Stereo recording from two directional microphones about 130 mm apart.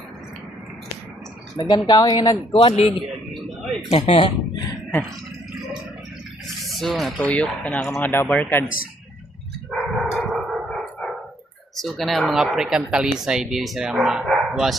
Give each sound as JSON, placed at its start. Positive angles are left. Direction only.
{"t": 1.5, "sound": "speech", "side_deg": 30}
{"t": 2.5, "sound": "a man's voice", "side_deg": 45}
{"t": 3.9, "sound": "a man's voice", "side_deg": 50}
{"t": 6.7, "sound": "speech", "side_deg": 0}
{"t": 9.6, "sound": "dog", "side_deg": -5}
{"t": 10.7, "sound": "dog", "side_deg": 5}
{"t": 11.8, "sound": "speech", "side_deg": 0}